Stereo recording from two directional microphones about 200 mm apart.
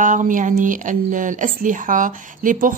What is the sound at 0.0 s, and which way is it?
Speech, 40° right (ahead or behind).